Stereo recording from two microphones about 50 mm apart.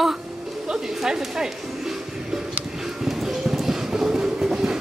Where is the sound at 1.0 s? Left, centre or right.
Centre.